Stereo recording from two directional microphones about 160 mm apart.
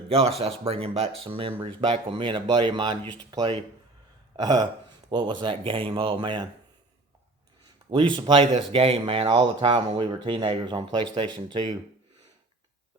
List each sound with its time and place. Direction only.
0.1 s speech: 40° right (ahead or behind)
8.1 s speech: 30° right (ahead or behind)